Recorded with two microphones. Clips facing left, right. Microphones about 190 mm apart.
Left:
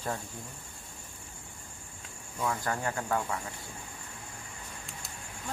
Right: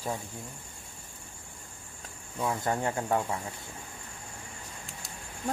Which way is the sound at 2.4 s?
20° right (ahead or behind).